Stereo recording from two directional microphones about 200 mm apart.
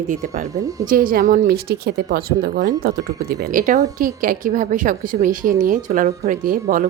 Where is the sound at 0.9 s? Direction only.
45° right (ahead or behind).